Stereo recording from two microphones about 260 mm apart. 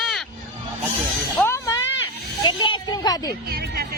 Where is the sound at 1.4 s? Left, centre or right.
Centre.